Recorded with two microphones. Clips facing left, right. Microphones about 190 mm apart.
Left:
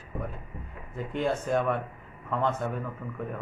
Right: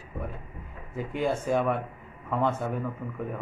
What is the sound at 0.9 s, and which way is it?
A man's voice, 5° right (ahead or behind).